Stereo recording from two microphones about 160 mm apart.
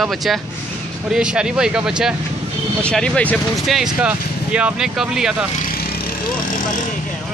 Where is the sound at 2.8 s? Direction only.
5° left (ahead or behind).